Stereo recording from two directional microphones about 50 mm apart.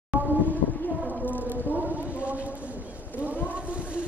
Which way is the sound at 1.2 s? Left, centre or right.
Left.